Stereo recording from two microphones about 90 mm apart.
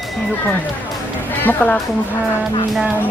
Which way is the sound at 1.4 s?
20° left (ahead or behind).